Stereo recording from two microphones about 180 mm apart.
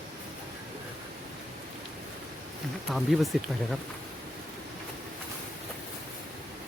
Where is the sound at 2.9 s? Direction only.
Centre (ahead or behind).